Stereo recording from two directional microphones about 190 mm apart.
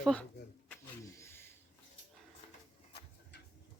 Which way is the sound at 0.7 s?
15° left (ahead or behind).